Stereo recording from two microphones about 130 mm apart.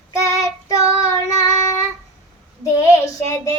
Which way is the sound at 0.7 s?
25° left (ahead or behind).